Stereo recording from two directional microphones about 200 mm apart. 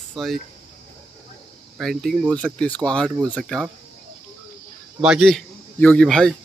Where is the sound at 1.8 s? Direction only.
Centre (ahead or behind).